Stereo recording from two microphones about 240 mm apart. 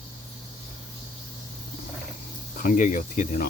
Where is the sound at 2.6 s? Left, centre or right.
Left.